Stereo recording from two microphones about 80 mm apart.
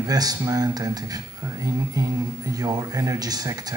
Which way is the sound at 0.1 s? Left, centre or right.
Right.